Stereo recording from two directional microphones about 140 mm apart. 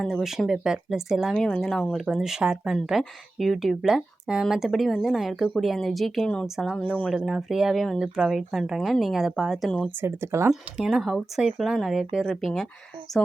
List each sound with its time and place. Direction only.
0.0 s speech: centre (ahead or behind)
10.0 s speech: 20° right (ahead or behind)
10.5 s speech: 5° right (ahead or behind)